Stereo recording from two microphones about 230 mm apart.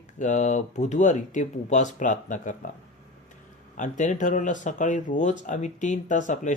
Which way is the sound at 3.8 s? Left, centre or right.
Left.